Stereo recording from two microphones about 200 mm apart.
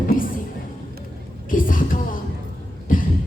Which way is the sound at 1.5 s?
45° left (ahead or behind).